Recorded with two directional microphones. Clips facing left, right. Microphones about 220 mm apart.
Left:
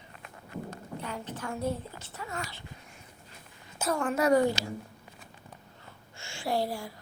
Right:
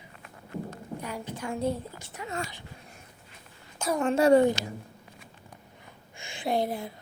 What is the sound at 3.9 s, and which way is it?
Speech, 25° right (ahead or behind).